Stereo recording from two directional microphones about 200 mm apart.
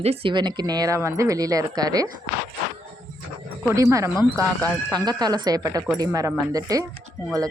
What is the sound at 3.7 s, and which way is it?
A woman's voice, 15° right (ahead or behind).